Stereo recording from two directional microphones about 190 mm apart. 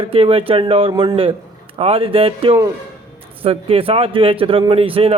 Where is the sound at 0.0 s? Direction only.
30° right (ahead or behind).